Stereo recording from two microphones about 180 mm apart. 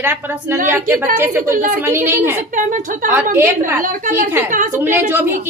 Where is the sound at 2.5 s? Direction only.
45° right (ahead or behind).